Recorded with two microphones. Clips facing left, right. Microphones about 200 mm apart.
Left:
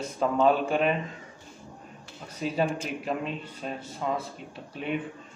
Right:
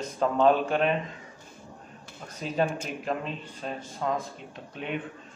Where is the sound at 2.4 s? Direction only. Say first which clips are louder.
Even; 5° left (ahead or behind).